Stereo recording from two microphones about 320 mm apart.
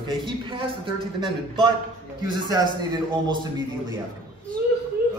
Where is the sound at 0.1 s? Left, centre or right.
Centre.